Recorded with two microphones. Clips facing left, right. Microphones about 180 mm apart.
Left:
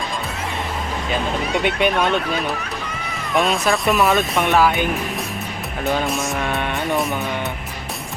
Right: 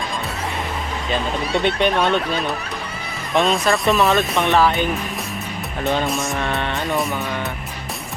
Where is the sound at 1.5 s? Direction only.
10° left (ahead or behind).